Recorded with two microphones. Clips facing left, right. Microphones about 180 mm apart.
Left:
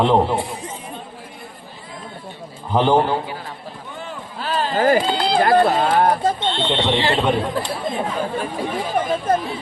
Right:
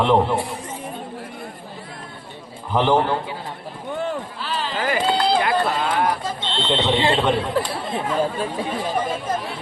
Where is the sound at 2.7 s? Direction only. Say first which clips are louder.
Left 2 dB; 15° left (ahead or behind).